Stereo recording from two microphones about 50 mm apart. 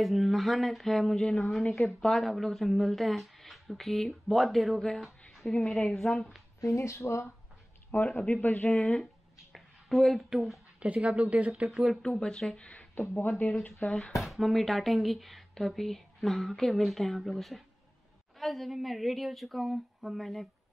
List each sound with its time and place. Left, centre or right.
0.0 s speech: centre
4.7 s a woman's voice: centre
6.6 s speech: left
8.1 s a man's voice: left
8.7 s speech: centre
9.5 s a sound: centre
10.8 s speech: right
12.0 s speech: centre
12.9 s a man's voice: left
14.1 s speech: centre